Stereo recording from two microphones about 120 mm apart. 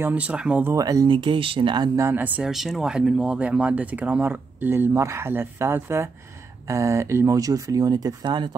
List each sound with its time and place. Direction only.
0.0 s speech: 10° right (ahead or behind)
0.7 s speech: 30° right (ahead or behind)
1.0 s speech: 45° right (ahead or behind)
2.0 s speech: 20° right (ahead or behind)
2.5 s speech: centre (ahead or behind); by 8.5 s 40° right (ahead or behind)